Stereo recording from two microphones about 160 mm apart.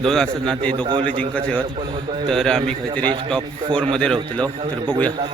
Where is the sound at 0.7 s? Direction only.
30° right (ahead or behind).